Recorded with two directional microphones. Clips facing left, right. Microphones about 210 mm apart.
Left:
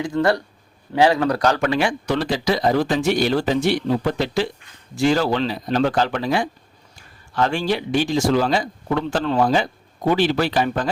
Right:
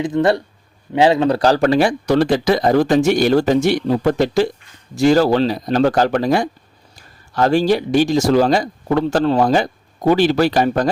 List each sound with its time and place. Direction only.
0.0 s speech: 20° right (ahead or behind); by 10.8 s 40° right (ahead or behind)